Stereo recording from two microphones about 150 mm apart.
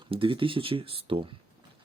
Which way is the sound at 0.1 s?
35° right (ahead or behind).